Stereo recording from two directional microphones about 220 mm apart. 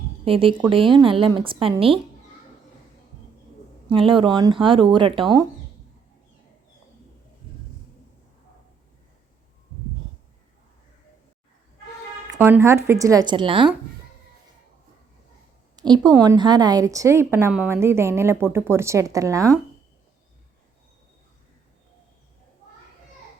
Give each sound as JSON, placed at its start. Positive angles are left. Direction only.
{"t": 0.3, "sound": "speech", "side_deg": -25}
{"t": 3.8, "sound": "speech", "side_deg": -25}
{"t": 12.3, "sound": "a woman's voice", "side_deg": -10}
{"t": 15.7, "sound": "a woman's voice", "side_deg": -20}